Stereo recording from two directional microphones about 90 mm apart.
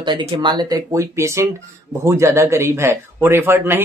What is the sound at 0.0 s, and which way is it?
A man's voice, 60° right (ahead or behind).